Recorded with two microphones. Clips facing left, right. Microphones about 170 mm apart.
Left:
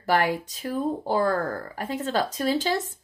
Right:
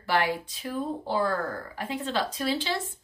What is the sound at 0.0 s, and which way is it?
A woman's voice, 45° left (ahead or behind).